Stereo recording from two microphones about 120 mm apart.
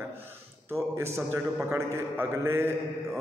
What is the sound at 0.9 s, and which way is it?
A man's voice, 20° right (ahead or behind).